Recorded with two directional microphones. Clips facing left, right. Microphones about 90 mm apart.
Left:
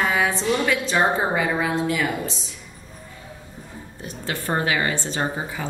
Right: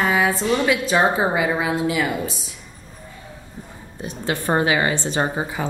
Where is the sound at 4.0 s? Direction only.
20° right (ahead or behind).